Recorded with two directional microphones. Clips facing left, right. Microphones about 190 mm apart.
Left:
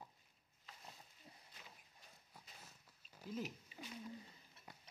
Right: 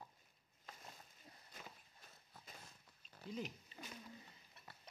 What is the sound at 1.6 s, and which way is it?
Walk, 50° right (ahead or behind).